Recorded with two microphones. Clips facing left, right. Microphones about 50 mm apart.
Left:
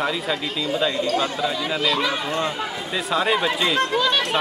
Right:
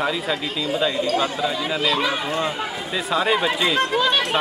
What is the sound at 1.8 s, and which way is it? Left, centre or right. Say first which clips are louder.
Speech: right 1 dB; centre.